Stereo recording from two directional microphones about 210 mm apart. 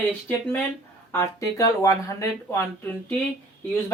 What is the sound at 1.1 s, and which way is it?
Speech, 15° left (ahead or behind).